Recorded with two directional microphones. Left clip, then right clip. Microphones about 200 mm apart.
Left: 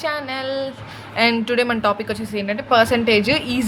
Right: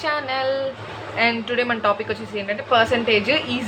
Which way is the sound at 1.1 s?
45° left (ahead or behind).